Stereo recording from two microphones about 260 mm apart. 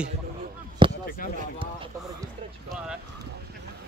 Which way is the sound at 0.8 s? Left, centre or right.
Centre.